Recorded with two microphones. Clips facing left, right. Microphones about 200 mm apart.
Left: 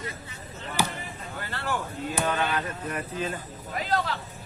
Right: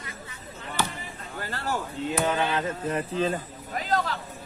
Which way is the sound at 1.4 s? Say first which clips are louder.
Right 1 dB; 40° right (ahead or behind).